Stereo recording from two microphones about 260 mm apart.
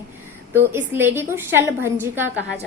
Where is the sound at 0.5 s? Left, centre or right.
Centre.